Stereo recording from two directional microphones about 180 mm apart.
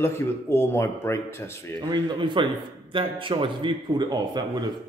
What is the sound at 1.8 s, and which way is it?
A man's voice, 25° right (ahead or behind).